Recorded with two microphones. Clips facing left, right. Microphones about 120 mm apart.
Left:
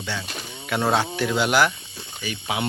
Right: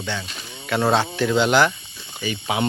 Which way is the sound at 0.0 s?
5° left (ahead or behind).